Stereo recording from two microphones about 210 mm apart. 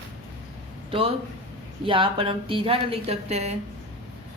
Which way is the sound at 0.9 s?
25° right (ahead or behind).